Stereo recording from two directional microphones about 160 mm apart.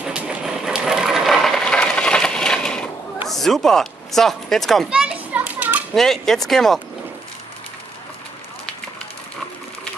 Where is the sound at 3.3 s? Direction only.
Centre (ahead or behind).